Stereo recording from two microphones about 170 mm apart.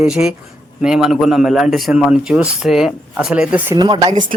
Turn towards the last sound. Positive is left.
turn(degrees=-25)  # may be behind; listen again after turning